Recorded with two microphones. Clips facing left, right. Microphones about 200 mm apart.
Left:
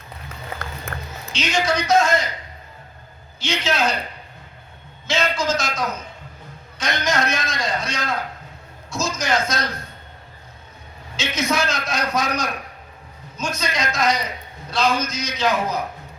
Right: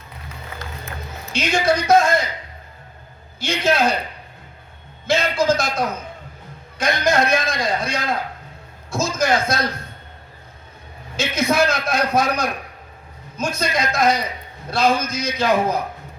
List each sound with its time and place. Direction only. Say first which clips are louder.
0.9 s a sound: left 1 dB; 60° left (ahead or behind)
1.3 s a man's voice: right 3 dB; 55° right (ahead or behind)
3.4 s a man's voice: right 3 dB; 55° right (ahead or behind)
5.0 s a man's voice: right 4 dB; 55° right (ahead or behind)
11.2 s a man's voice: right 4 dB; 55° right (ahead or behind)